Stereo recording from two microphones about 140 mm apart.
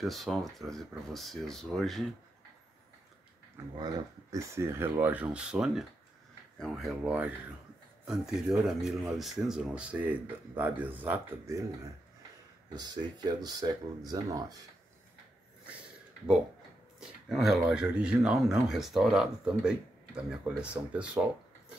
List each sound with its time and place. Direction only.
0.0 s speech: centre (ahead or behind)
3.8 s speech: 25° right (ahead or behind)
12.7 s speech: 30° right (ahead or behind)
17.0 s speech: centre (ahead or behind)